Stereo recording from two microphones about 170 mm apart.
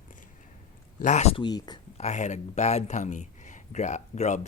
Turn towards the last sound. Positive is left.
turn(degrees=45)  # may be behind; listen again after turning